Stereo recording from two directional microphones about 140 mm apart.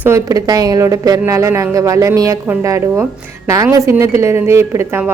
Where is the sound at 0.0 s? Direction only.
20° right (ahead or behind).